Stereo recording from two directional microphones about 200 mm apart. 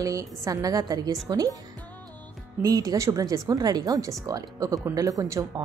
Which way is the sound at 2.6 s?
20° right (ahead or behind).